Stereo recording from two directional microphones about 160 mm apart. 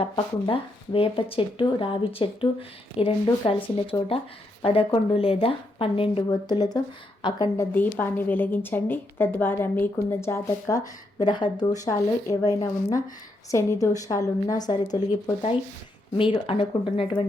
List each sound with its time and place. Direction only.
0.0 s a woman's voice: 35° left (ahead or behind)
15.0 s speech: 50° left (ahead or behind)
16.1 s speech: 35° left (ahead or behind)